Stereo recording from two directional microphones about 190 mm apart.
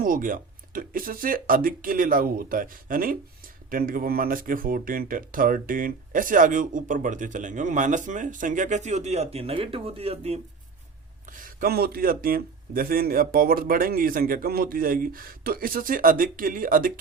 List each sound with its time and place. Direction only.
0.0 s speech: 45° right (ahead or behind)
11.3 s speech: 45° right (ahead or behind)